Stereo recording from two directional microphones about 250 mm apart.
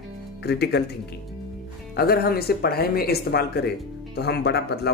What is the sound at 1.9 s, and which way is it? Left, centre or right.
Speech, left.